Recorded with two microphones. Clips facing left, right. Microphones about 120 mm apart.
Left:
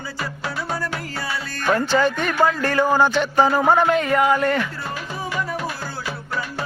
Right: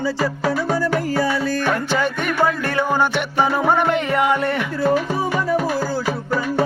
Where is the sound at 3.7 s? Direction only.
20° right (ahead or behind).